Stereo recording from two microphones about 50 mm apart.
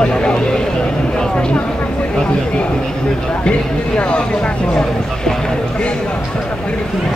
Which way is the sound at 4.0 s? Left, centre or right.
Left.